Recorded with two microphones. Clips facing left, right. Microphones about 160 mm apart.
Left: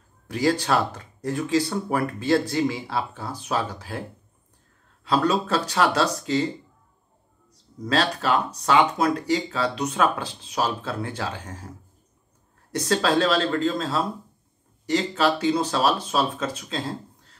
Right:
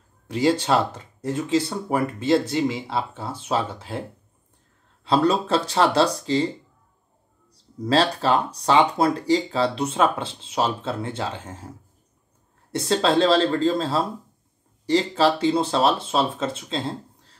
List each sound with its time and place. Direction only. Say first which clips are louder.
0.3 s speech: right 2 dB; 25° right (ahead or behind)
5.0 s speech: right 2 dB; 30° right (ahead or behind)
7.5 s speech: right 4 dB; 30° right (ahead or behind)
12.7 s speech: right 2 dB; 25° right (ahead or behind)